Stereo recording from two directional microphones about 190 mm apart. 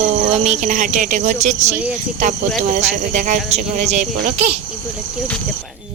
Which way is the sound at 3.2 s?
40° right (ahead or behind).